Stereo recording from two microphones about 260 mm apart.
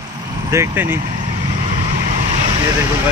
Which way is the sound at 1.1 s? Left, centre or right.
Right.